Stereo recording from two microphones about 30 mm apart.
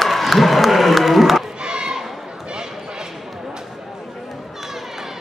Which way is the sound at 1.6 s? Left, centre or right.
Right.